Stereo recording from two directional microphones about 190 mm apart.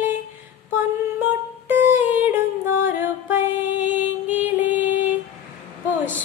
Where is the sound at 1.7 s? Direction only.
10° right (ahead or behind).